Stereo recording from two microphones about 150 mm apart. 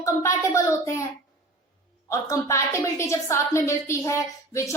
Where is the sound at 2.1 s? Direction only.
20° left (ahead or behind).